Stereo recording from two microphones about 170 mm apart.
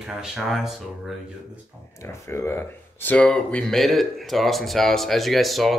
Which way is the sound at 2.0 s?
15° left (ahead or behind).